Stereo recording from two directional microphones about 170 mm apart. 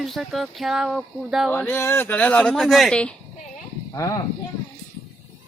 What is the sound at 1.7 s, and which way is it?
Speech, 15° left (ahead or behind).